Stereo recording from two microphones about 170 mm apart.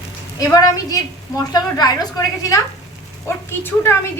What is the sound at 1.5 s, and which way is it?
A woman's voice, 25° left (ahead or behind).